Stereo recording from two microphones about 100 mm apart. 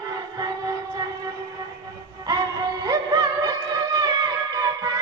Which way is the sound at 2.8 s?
40° right (ahead or behind).